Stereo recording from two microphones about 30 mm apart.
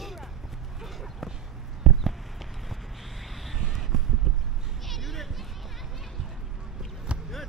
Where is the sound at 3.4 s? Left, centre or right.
Centre.